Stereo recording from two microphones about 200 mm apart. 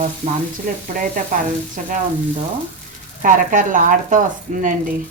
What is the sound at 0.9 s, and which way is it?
Speech, 40° right (ahead or behind).